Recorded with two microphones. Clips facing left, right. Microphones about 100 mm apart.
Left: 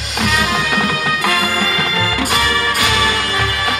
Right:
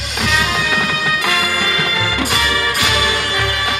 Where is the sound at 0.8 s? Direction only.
35° left (ahead or behind).